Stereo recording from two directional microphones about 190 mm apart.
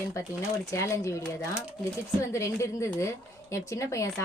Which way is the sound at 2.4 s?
15° left (ahead or behind).